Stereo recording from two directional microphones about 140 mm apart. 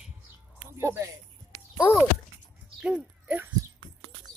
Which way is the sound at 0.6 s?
20° right (ahead or behind).